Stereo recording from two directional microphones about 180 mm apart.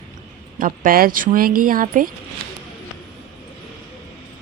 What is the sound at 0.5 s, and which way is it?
Speech, 50° right (ahead or behind).